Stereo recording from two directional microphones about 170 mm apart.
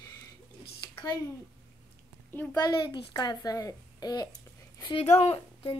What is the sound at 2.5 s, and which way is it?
A woman's voice, 25° left (ahead or behind).